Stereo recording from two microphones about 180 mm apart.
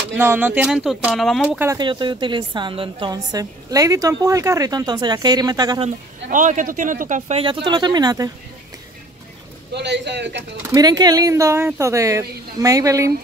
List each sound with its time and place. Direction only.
0.2 s speech: 10° right (ahead or behind)
1.8 s a woman's voice: 25° right (ahead or behind)
6.3 s speech: 45° right (ahead or behind)
7.4 s a woman's voice: 25° right (ahead or behind)
9.8 s a man's voice: 75° right (ahead or behind)
10.7 s speech: 20° right (ahead or behind)